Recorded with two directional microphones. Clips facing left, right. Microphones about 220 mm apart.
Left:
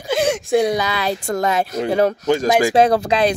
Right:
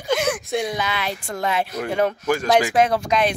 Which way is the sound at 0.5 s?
40° left (ahead or behind).